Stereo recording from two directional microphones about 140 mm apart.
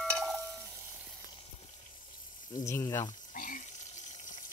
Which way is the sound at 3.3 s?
75° left (ahead or behind).